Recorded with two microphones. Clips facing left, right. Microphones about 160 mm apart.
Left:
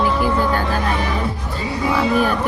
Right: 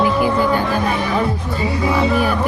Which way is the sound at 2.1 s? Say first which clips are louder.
Even; 10° right (ahead or behind).